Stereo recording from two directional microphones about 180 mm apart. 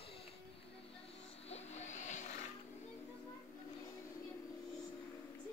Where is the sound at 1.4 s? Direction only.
35° left (ahead or behind).